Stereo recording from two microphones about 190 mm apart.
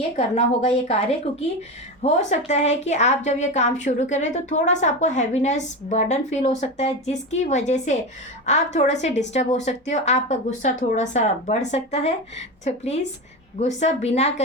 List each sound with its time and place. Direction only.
0.2 s a woman's voice: 35° left (ahead or behind)